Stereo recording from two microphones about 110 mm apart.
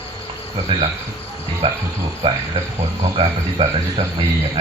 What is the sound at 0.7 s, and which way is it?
A man's voice, 50° right (ahead or behind).